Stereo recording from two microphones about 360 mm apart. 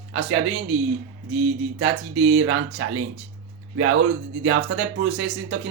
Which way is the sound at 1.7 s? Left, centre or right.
Right.